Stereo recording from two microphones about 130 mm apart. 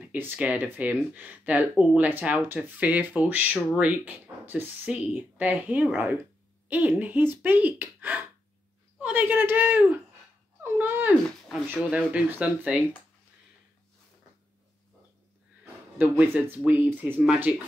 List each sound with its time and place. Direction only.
0.0 s speech: 15° right (ahead or behind)
11.2 s speech: 5° left (ahead or behind)
11.9 s speech: 10° right (ahead or behind)
16.0 s speech: 10° right (ahead or behind)